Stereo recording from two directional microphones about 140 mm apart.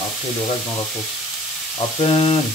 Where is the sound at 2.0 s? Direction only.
40° left (ahead or behind).